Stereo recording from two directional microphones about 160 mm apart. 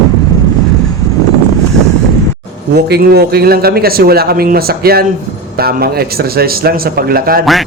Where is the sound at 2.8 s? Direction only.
85° right.